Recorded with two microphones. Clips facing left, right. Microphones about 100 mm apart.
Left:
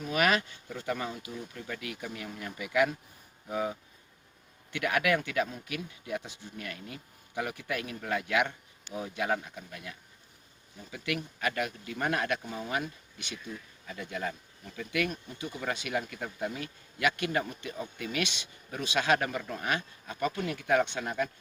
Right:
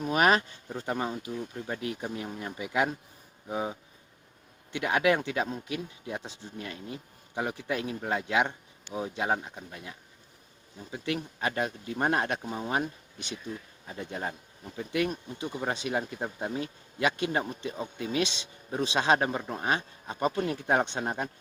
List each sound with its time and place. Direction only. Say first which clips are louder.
0.1 s speech: right 3 dB; 35° right (ahead or behind)
10.9 s speech: right 2 dB; 30° right (ahead or behind)